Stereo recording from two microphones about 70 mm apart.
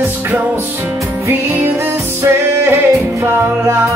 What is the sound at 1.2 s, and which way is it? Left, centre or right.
Music, right.